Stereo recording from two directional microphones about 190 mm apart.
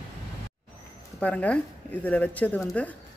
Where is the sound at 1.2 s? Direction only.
5° left (ahead or behind).